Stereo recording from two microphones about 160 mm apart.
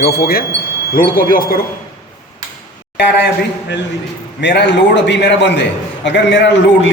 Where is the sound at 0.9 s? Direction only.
60° left (ahead or behind).